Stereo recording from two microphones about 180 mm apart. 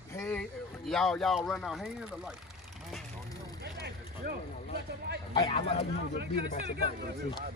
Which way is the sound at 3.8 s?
60° right (ahead or behind).